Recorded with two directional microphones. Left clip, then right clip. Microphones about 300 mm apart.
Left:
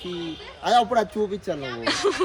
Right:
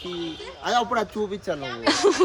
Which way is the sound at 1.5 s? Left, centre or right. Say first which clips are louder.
Right 2 dB; centre.